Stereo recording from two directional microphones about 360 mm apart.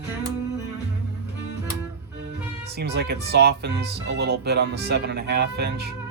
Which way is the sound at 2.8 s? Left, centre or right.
Right.